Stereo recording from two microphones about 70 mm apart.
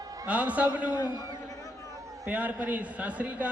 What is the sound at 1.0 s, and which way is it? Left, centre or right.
Speech, left.